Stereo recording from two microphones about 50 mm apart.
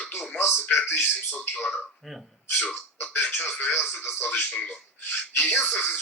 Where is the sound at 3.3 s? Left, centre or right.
Left.